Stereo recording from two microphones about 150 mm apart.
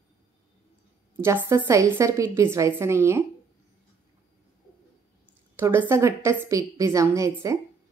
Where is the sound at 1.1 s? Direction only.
15° right (ahead or behind).